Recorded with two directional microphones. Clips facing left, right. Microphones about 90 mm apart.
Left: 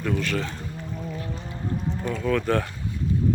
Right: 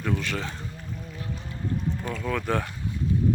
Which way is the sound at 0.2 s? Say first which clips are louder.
Left 4 dB; 20° right (ahead or behind).